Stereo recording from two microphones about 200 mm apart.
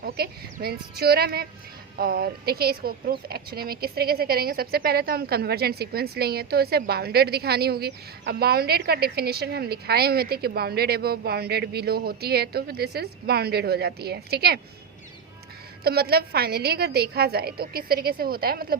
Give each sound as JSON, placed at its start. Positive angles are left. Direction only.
{"t": 0.0, "sound": "speech", "side_deg": -50}
{"t": 15.8, "sound": "speech", "side_deg": -50}